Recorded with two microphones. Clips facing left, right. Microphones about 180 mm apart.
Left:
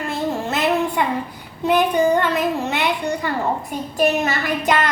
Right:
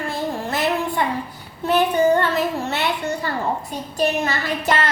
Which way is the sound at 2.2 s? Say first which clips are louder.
Left 1 dB; 15° left (ahead or behind).